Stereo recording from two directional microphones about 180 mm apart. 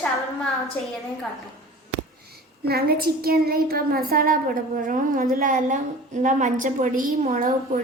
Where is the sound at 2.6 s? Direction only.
60° right (ahead or behind).